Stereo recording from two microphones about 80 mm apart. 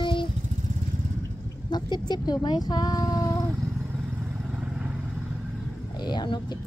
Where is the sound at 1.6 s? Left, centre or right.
Left.